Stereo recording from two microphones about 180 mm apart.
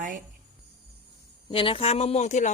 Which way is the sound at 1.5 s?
30° left (ahead or behind).